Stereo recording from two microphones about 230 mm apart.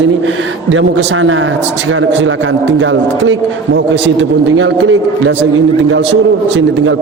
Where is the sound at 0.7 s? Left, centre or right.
Right.